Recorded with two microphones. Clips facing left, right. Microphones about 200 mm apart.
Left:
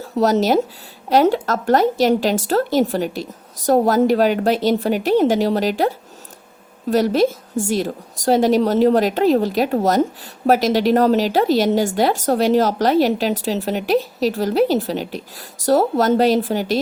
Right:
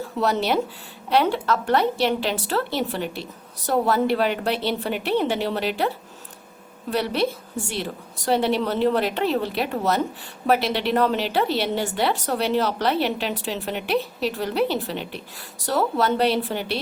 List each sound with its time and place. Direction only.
0.0 s a woman's voice: 40° left (ahead or behind)
6.9 s a woman's voice: 40° left (ahead or behind)